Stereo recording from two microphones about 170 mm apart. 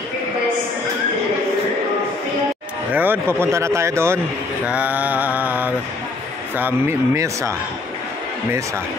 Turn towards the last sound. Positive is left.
turn(degrees=-15)  # may be behind; listen again after turning